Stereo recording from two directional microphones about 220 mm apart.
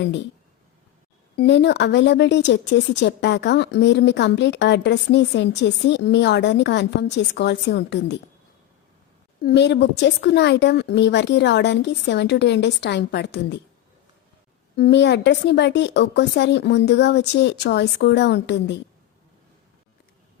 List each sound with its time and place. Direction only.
1.4 s speech: 50° left (ahead or behind)
9.4 s speech: 45° left (ahead or behind)
14.8 s speech: 50° left (ahead or behind)